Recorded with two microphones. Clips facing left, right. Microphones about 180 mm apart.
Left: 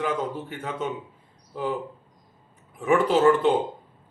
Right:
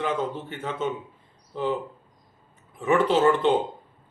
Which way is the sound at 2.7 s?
10° left (ahead or behind).